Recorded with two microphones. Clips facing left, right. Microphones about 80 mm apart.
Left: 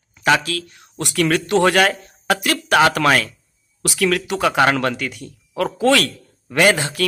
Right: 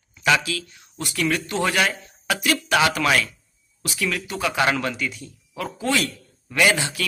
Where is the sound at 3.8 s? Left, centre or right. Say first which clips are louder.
Left 8 dB; left.